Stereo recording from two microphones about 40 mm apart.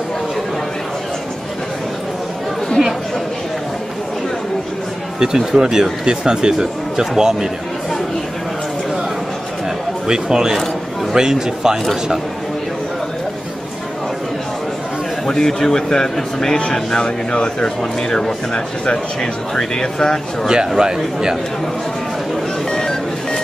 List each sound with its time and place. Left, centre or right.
5.2 s speech: centre
10.0 s speech: centre
11.8 s a man's voice: centre
15.2 s a man's voice: centre
17.0 s speech: left
19.5 s a man's voice: centre
20.4 s speech: centre
22.7 s music: centre